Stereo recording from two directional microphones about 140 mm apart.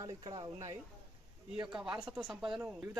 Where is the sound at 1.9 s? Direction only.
10° right (ahead or behind).